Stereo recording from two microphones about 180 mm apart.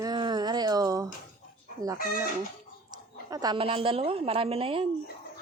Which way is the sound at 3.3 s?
20° right (ahead or behind).